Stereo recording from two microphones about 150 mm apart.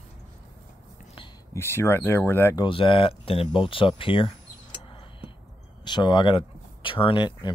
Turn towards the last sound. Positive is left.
turn(degrees=30)  # may be behind; listen again after turning